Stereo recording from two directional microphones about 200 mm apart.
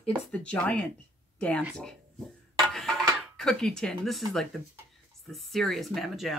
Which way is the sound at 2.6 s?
5° left (ahead or behind).